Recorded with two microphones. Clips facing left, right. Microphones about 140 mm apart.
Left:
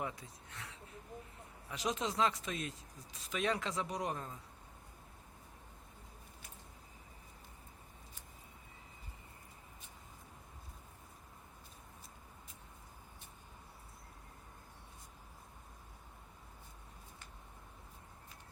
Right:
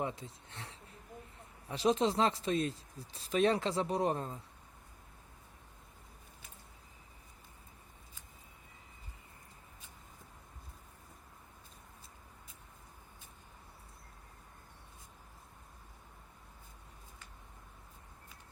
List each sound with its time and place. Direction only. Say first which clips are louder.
0.0 s speech: right 4 dB; 25° right (ahead or behind)